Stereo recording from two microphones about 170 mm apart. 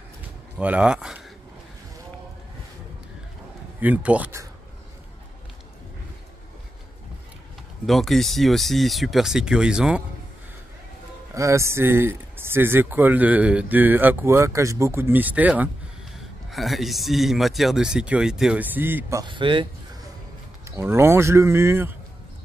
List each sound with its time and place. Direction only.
0.6 s speech: 5° right (ahead or behind)
3.8 s speech: 10° right (ahead or behind)
7.8 s speech: centre (ahead or behind)
11.3 s speech: 15° right (ahead or behind)
19.2 s speech: 30° right (ahead or behind)
20.6 s speech: 15° right (ahead or behind)